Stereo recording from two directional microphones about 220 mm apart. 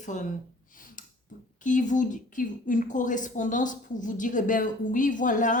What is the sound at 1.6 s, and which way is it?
A woman's voice, 35° left (ahead or behind).